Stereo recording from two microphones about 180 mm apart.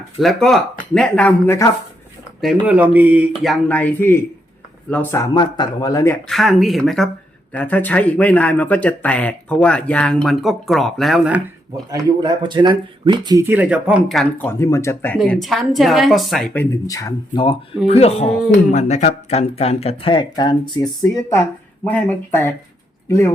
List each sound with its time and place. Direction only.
0.2 s speech: centre (ahead or behind)
2.4 s speech: 5° right (ahead or behind); by 6.1 s 20° left (ahead or behind)
6.2 s speech: centre (ahead or behind)
11.9 s speech: 20° right (ahead or behind); by 14.4 s centre (ahead or behind)
14.4 s speech: 15° left (ahead or behind)
15.2 s speech: centre (ahead or behind)
16.6 s speech: 20° left (ahead or behind)